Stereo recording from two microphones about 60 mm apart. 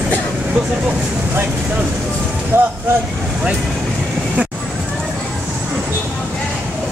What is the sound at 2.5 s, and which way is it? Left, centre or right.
Vehicle, right.